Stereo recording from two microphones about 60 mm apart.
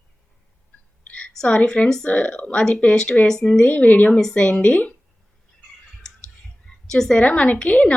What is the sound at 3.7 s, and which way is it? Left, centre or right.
Speech, left.